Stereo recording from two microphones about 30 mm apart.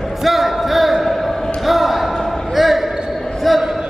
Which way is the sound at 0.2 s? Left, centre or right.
Centre.